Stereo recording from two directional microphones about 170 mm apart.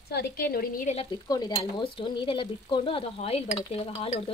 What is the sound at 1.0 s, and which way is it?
Stir, 25° left (ahead or behind).